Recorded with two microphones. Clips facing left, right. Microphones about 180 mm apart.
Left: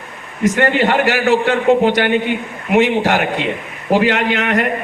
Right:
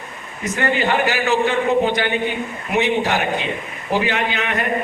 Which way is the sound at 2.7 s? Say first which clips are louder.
Left 5 dB; 90° left.